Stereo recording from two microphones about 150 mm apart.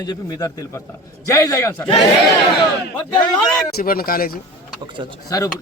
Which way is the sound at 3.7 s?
80° left.